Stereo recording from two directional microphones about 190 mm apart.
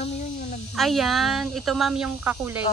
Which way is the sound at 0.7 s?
Centre (ahead or behind).